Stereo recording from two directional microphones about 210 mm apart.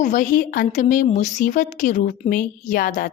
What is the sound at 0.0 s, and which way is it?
A woman's voice, 35° left (ahead or behind).